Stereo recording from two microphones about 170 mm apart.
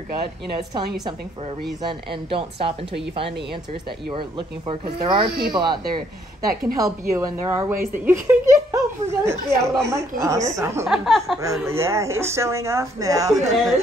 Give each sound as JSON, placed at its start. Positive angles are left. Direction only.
{"t": 1.8, "sound": "a woman's voice", "side_deg": -30}
{"t": 4.1, "sound": "a woman's voice", "side_deg": -30}
{"t": 6.8, "sound": "speech", "side_deg": -15}
{"t": 10.9, "sound": "speech", "side_deg": 0}
{"t": 11.4, "sound": "speech", "side_deg": -15}